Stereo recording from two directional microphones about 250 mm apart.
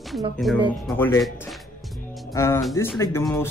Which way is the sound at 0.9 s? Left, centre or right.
Centre.